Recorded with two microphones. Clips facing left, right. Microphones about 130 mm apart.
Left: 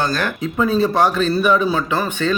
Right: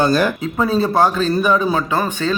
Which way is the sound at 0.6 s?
35° right (ahead or behind).